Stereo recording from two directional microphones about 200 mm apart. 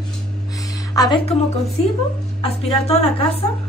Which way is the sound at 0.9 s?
20° left (ahead or behind).